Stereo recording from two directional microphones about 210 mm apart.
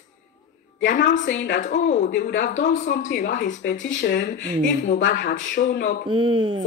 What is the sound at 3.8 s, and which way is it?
Speech, 60° left (ahead or behind).